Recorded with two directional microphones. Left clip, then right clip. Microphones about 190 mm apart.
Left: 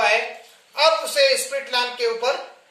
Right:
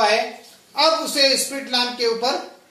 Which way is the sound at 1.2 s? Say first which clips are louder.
Even; 15° right (ahead or behind).